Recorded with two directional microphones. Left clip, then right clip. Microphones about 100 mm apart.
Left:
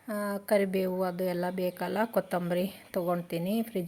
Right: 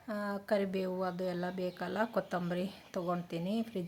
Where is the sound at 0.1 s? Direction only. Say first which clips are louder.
Left 6 dB; 35° left (ahead or behind).